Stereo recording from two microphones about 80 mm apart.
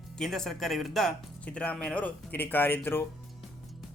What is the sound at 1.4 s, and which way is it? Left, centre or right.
Speech, centre.